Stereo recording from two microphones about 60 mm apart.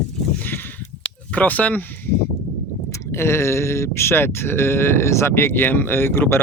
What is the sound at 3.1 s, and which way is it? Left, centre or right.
Speech, left.